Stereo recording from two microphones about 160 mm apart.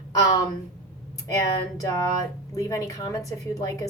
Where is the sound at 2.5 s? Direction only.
20° left (ahead or behind).